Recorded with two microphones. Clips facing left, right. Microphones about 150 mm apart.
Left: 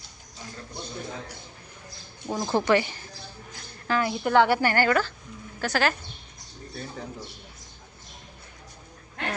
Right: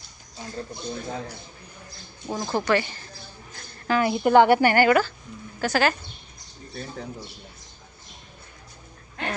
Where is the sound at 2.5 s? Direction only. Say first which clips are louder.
Left 1 dB; 20° left (ahead or behind).